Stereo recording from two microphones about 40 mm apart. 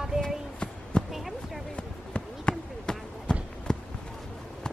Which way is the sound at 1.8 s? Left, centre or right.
Left.